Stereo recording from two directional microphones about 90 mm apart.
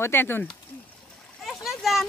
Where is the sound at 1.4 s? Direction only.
Centre (ahead or behind).